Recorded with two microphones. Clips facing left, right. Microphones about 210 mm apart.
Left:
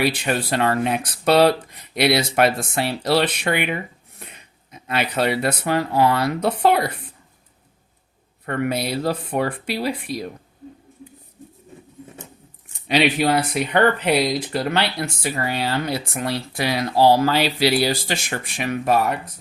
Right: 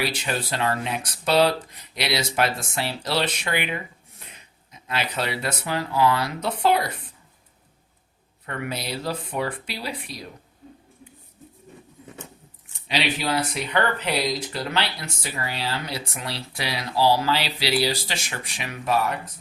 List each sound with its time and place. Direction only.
0.0 s speech: 60° left (ahead or behind)
8.4 s speech: 55° left (ahead or behind)
12.9 s speech: 55° left (ahead or behind)